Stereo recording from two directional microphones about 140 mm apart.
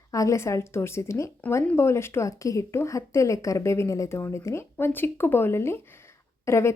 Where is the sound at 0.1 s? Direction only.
20° left (ahead or behind).